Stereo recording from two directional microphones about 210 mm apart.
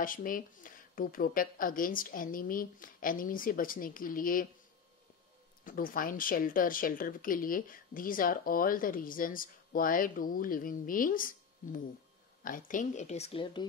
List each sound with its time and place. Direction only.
0.0 s speech: 40° left (ahead or behind)
5.6 s speech: 40° left (ahead or behind); by 13.7 s 25° left (ahead or behind)